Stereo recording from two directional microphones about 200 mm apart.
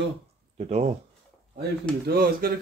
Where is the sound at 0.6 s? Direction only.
30° right (ahead or behind).